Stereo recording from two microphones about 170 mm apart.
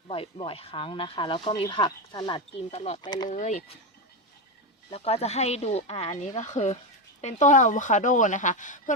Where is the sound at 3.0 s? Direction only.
25° left (ahead or behind).